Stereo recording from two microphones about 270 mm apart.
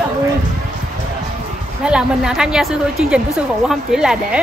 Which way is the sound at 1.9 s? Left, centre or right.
Centre.